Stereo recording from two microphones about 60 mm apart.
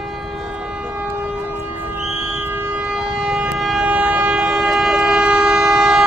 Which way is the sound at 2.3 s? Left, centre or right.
Right.